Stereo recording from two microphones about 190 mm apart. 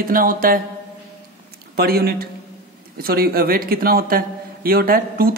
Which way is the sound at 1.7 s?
55° right (ahead or behind).